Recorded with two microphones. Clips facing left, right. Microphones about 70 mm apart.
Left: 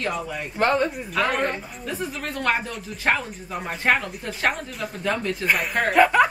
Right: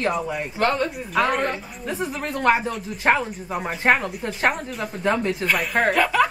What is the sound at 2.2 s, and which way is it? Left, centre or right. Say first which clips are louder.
Speech: right 5 dB; centre.